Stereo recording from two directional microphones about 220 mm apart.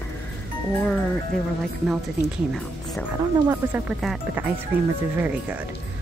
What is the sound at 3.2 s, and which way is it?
Speech, 10° right (ahead or behind).